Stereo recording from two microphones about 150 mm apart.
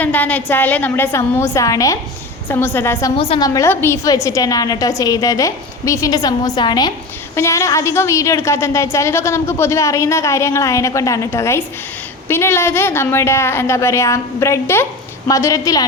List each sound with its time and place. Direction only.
0.0 s a woman's voice: 10° left (ahead or behind)
3.2 s a woman's voice: 35° left (ahead or behind)
3.4 s a woman's voice: 20° left (ahead or behind)